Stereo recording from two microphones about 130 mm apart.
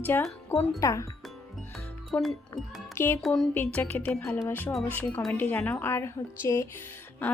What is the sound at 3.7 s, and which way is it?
Speech, 15° left (ahead or behind).